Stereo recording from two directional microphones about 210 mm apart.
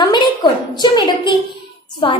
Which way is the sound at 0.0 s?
20° left (ahead or behind).